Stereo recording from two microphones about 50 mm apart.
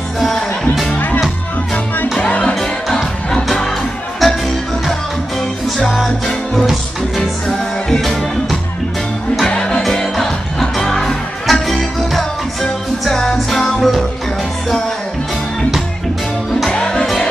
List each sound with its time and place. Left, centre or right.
0.2 s music: centre
2.2 s music: left
4.2 s music: centre
7.2 s music: centre
9.6 s music: centre
16.7 s music: centre